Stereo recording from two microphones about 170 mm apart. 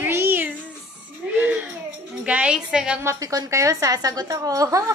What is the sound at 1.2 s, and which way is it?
Baby cry, 10° right (ahead or behind).